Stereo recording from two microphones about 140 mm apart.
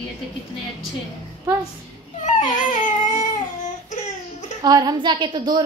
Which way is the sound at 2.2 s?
65° left (ahead or behind).